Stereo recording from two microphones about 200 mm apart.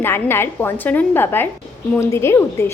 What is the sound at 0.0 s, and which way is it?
A woman's voice, 10° left (ahead or behind).